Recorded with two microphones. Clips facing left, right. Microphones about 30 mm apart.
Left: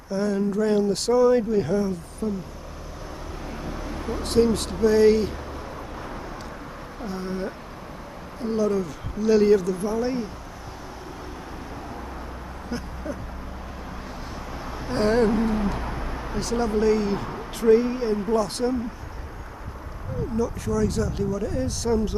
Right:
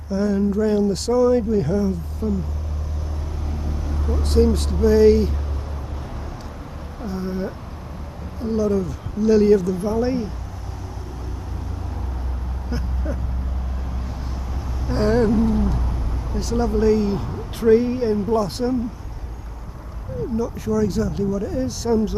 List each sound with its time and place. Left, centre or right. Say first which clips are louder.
0.1 s speech: right 3 dB; centre
3.5 s vehicle: right 1 dB; left
4.2 s speech: right 2 dB; centre
7.0 s a sound: right 3 dB; centre
8.4 s speech: right 3 dB; centre
9.8 s speech: right 4 dB; centre
14.9 s a sound: right 2 dB; centre
15.2 s a sound: right 3 dB; left
16.3 s speech: right 2 dB; centre
18.3 s speech: right 1 dB; centre
20.3 s speech: right 3 dB; centre